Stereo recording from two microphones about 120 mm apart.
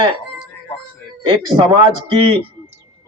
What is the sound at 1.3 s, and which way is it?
A man's voice, 45° right (ahead or behind).